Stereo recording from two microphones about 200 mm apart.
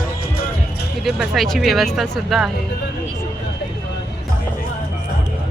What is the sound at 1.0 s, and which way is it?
Speech, centre (ahead or behind).